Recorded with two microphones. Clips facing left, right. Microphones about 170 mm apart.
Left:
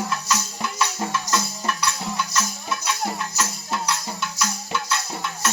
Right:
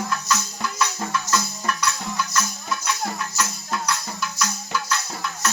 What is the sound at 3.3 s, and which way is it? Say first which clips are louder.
Music: even; 25° left (ahead or behind).